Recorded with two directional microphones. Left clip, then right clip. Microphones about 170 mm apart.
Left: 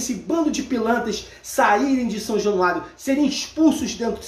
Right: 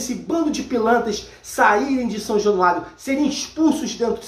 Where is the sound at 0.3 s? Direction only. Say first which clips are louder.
Right 1 dB; 10° left (ahead or behind).